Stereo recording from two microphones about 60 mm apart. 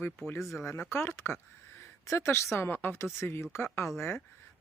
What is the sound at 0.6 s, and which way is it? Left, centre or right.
Speech, left.